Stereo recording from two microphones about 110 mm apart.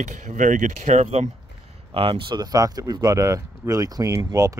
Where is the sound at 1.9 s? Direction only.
50° right (ahead or behind).